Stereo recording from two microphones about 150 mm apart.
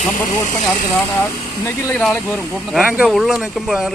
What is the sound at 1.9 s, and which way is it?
Speech, 5° left (ahead or behind).